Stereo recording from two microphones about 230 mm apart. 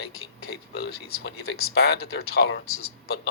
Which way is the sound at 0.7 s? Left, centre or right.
Left.